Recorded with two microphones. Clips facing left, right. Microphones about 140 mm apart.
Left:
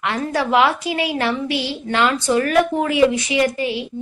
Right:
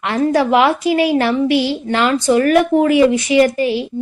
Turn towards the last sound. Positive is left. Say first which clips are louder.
# right 6 dB
turn(degrees=-35)  # may be behind; listen again after turning